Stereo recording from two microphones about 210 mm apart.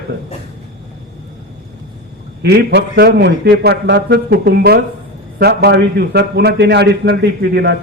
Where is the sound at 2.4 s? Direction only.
50° right (ahead or behind).